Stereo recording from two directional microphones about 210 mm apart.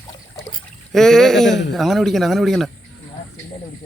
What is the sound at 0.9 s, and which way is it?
A man's voice, centre (ahead or behind).